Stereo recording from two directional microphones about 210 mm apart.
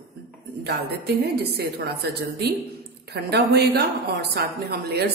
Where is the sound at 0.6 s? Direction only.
50° right (ahead or behind).